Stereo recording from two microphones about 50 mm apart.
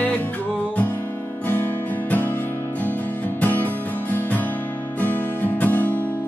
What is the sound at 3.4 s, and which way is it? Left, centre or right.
Music, left.